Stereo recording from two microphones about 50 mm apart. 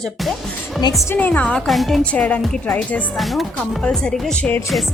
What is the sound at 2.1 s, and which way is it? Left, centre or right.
Speech, left.